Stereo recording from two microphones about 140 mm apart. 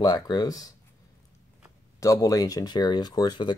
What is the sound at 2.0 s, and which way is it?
Speech, 25° left (ahead or behind).